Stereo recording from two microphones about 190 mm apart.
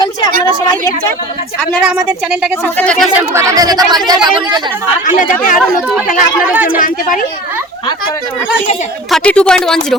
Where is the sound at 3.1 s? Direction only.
15° right (ahead or behind).